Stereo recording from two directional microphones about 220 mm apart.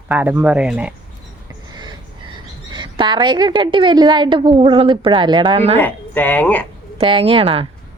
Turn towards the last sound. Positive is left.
turn(degrees=-25)  # may be behind; listen again after turning